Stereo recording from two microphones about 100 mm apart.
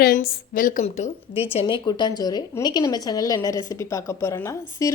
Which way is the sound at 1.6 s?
50° left (ahead or behind).